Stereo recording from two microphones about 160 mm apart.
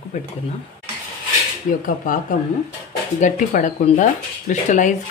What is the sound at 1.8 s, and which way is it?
Speech, 55° left (ahead or behind).